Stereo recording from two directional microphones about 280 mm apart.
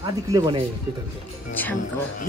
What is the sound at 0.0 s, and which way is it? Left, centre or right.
Speech, centre.